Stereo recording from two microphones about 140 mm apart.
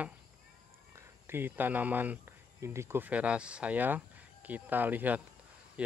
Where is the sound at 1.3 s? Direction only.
15° right (ahead or behind).